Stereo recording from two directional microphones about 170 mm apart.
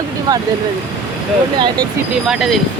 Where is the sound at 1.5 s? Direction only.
25° right (ahead or behind).